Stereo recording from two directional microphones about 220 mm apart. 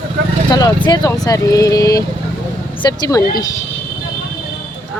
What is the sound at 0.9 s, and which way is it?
Speech, 15° left (ahead or behind).